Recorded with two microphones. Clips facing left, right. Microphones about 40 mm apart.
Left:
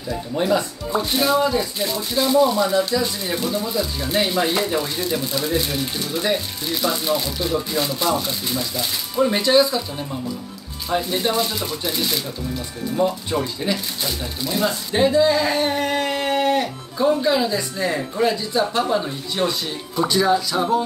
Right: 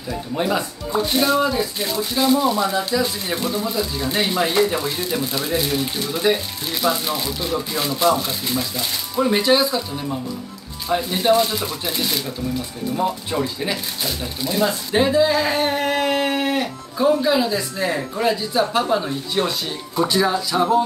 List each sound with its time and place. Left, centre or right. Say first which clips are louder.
0.1 s speech: left 1 dB; centre
10.9 s speech: right 3 dB; centre